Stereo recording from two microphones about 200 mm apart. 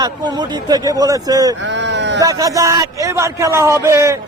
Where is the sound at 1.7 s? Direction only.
60° right (ahead or behind).